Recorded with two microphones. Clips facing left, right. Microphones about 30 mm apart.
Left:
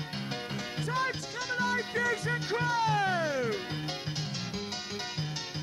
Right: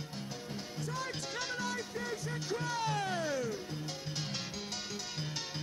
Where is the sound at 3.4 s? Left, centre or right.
Left.